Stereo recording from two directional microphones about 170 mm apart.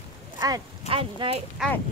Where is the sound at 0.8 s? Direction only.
30° right (ahead or behind).